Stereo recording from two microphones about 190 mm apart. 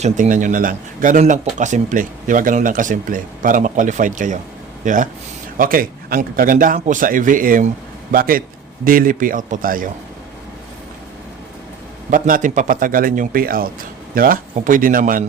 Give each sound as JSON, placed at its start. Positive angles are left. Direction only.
{"t": 0.0, "sound": "speech", "side_deg": -40}
{"t": 12.1, "sound": "speech", "side_deg": -45}